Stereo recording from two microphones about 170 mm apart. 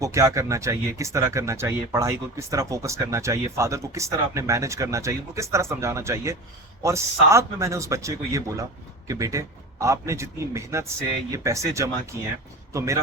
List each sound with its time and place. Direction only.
0.0 s speech: 20° right (ahead or behind)